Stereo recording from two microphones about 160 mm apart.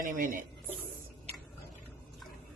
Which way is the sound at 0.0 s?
55° right (ahead or behind).